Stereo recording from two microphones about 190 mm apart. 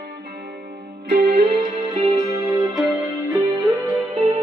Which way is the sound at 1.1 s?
60° right (ahead or behind).